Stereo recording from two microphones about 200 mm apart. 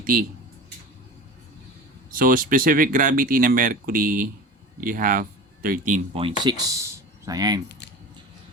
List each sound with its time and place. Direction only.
0.0 s speech: 45° right (ahead or behind)
2.0 s speech: 45° right (ahead or behind)
6.4 s speech: 20° right (ahead or behind)